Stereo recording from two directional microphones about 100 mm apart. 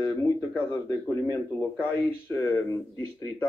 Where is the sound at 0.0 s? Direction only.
25° left (ahead or behind).